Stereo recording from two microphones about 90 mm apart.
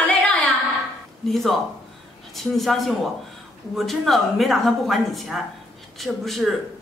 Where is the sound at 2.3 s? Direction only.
Centre (ahead or behind).